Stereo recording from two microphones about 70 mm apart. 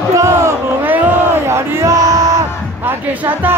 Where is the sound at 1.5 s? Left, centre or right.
Right.